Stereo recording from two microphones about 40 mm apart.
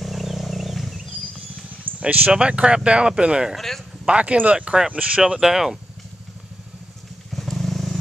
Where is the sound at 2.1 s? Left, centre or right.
Right.